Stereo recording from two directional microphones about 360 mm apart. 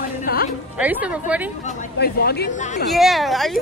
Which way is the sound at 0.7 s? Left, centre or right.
Centre.